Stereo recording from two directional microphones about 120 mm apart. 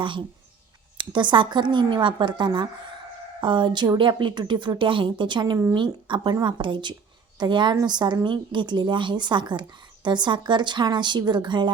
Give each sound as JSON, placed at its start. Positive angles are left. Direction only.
{"t": 0.0, "sound": "a woman's voice", "side_deg": -45}